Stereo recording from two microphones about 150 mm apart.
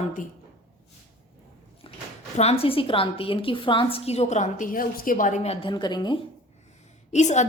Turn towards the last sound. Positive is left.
turn(degrees=50)  # may be behind; listen again after turning